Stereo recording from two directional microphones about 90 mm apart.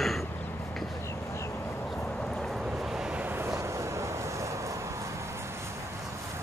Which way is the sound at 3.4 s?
35° right (ahead or behind).